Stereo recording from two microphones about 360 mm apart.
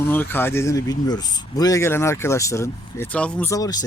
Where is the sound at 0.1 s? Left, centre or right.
Centre.